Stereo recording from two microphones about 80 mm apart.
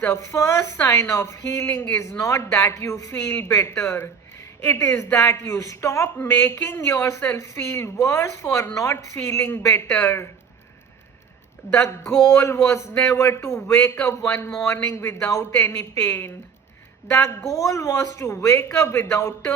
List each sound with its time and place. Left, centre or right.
0.1 s a woman's voice: left
1.6 s a woman's voice: left
3.1 s a woman's voice: left
4.6 s a woman's voice: left
5.1 s a woman's voice: left
11.7 s a woman's voice: left